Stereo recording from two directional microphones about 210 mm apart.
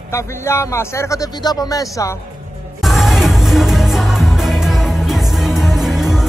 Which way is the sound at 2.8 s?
Centre (ahead or behind).